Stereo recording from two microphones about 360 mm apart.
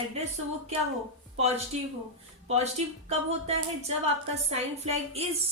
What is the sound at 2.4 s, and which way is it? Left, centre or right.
A woman's voice, centre.